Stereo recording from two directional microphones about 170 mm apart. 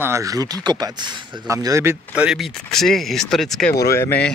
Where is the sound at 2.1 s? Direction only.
5° right (ahead or behind).